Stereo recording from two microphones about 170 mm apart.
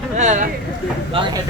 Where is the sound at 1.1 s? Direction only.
30° right (ahead or behind).